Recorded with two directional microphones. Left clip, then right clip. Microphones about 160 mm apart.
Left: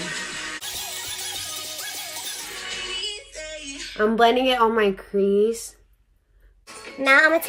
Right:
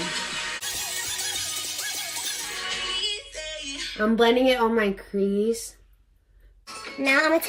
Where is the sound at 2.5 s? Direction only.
40° right (ahead or behind).